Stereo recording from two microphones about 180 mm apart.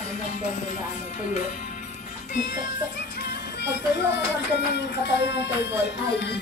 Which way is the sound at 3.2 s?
65° left (ahead or behind).